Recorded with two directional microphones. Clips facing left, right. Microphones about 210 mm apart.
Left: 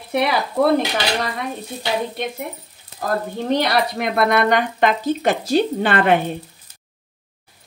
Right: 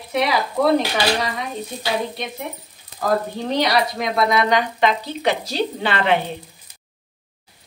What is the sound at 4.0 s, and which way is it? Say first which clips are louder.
Speech: left 1 dB; 60° left (ahead or behind).